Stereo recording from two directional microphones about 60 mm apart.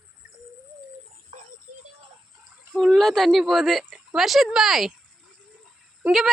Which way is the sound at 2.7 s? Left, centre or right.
Centre.